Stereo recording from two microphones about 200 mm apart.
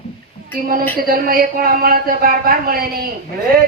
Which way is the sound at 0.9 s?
45° right (ahead or behind).